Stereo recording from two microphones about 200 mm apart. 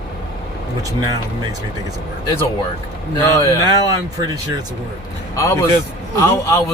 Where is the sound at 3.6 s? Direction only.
20° right (ahead or behind).